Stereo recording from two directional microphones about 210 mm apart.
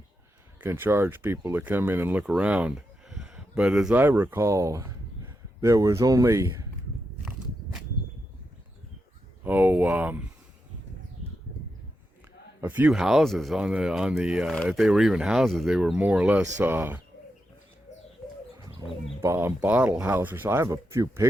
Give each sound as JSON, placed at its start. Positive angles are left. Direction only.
{"t": 0.6, "sound": "speech", "side_deg": -10}
{"t": 7.3, "sound": "walk", "side_deg": -5}
{"t": 9.4, "sound": "speech", "side_deg": -10}
{"t": 12.6, "sound": "speech", "side_deg": -10}
{"t": 18.8, "sound": "speech", "side_deg": -15}